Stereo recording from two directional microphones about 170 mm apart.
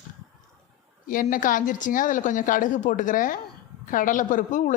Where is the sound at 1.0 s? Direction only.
55° left (ahead or behind).